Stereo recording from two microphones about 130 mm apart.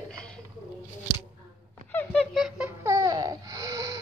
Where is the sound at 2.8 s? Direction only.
25° right (ahead or behind).